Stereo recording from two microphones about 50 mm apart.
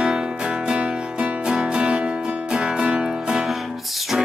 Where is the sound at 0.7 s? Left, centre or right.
Right.